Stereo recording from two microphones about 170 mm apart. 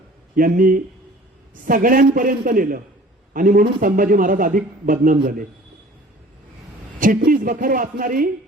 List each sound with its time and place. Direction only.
0.3 s a man's voice: 55° right (ahead or behind)
7.3 s a man's voice: 55° right (ahead or behind)